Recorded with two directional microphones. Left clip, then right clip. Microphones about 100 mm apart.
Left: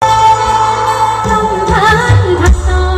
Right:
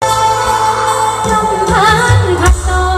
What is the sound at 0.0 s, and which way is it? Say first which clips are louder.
Music: left 4 dB; 20° right (ahead or behind).